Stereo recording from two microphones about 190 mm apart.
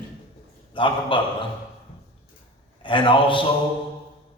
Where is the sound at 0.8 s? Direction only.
25° left (ahead or behind).